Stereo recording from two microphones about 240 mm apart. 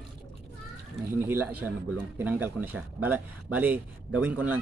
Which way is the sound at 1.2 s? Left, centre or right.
Centre.